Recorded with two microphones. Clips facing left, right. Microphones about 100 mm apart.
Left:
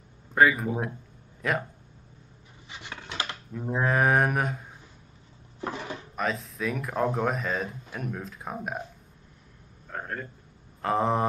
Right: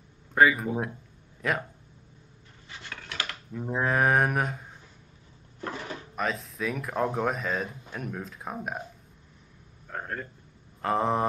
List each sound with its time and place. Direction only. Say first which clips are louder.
0.3 s speech: even; centre (ahead or behind)
2.7 s coin: left 2 dB; 20° left (ahead or behind)
3.5 s speech: left 1 dB; centre (ahead or behind)
5.6 s dishes: left 2 dB; 15° left (ahead or behind)
6.1 s speech: left 1 dB; centre (ahead or behind)
9.8 s a sound: even; centre (ahead or behind)
10.8 s speech: left 1 dB; centre (ahead or behind)